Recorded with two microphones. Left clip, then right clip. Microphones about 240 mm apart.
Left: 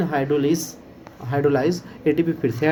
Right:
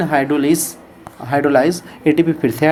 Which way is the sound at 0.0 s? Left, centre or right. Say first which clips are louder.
Right 5 dB; right.